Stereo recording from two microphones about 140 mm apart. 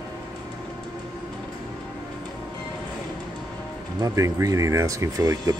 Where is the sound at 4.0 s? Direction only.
25° right (ahead or behind).